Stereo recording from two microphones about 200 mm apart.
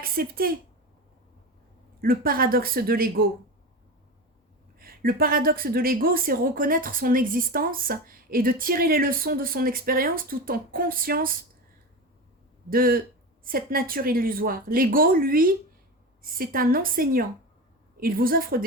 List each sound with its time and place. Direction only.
0.0 s speech: 50° right (ahead or behind)
2.0 s a woman's voice: 45° right (ahead or behind)
4.8 s a woman's voice: 45° right (ahead or behind)
12.7 s a woman's voice: 45° right (ahead or behind)